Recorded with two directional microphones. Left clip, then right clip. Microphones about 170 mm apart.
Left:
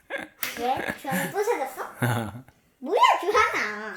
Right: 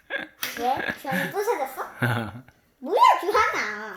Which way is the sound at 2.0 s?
10° left (ahead or behind).